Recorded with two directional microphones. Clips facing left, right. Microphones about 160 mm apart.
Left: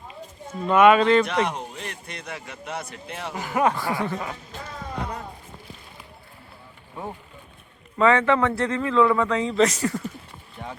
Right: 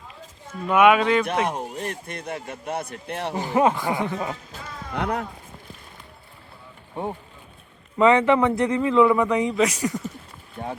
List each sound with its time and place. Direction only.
0.7 s a man's voice: 10° right (ahead or behind)
1.3 s a man's voice: 50° right (ahead or behind)
3.3 s speech: 25° right (ahead or behind)
4.9 s speech: 70° right (ahead or behind)
6.9 s a man's voice: 30° right (ahead or behind)
10.6 s a man's voice: 45° right (ahead or behind)